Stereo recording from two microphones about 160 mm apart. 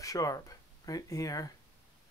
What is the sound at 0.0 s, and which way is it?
Speech, 20° left (ahead or behind).